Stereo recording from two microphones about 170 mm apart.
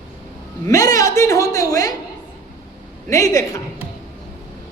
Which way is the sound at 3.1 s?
20° left (ahead or behind).